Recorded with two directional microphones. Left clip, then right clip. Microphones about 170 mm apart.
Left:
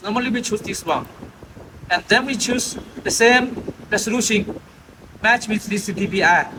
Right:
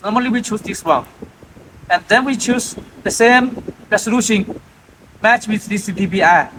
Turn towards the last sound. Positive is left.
turn(degrees=-20)  # may be behind; listen again after turning